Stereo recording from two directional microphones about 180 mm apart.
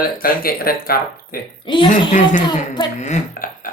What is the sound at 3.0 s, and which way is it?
Speech, 40° left (ahead or behind).